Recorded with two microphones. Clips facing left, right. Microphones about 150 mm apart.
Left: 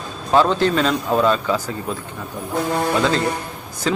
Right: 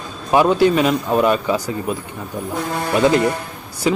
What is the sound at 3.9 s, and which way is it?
Speech, 10° right (ahead or behind).